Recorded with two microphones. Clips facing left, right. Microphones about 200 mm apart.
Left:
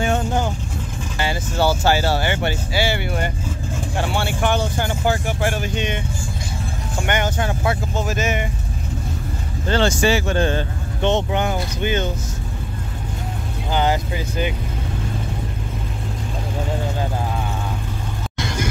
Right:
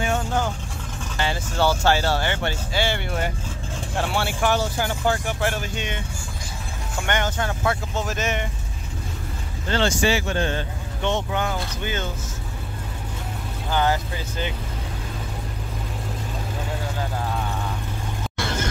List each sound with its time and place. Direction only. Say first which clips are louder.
0.0 s vehicle: left 4 dB; 35° left (ahead or behind)
1.1 s vehicle: left 2 dB; 5° left (ahead or behind)
1.8 s speech: left 2 dB; 5° left (ahead or behind)
7.1 s speech: left 3 dB; 15° left (ahead or behind)
8.0 s speech: left 5 dB; 5° left (ahead or behind)
9.7 s speech: left 3 dB; 45° left (ahead or behind)
11.1 s speech: left 5 dB; 25° left (ahead or behind)
13.7 s speech: left 2 dB; 15° left (ahead or behind)
18.4 s music: left 2 dB; 15° left (ahead or behind)